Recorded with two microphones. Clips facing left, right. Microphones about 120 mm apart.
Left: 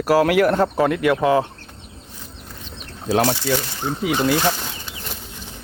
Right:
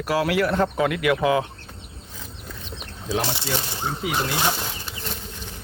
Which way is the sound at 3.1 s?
65° left (ahead or behind).